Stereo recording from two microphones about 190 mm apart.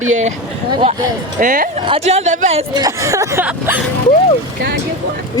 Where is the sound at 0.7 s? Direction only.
25° right (ahead or behind).